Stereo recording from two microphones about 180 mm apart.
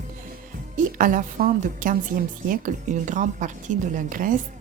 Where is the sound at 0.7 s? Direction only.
50° right (ahead or behind).